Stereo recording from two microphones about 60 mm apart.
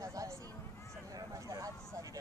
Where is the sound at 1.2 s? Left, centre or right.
Right.